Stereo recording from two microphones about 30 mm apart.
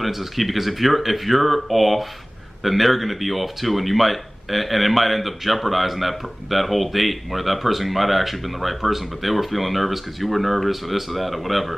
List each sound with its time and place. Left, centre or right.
0.0 s speech: centre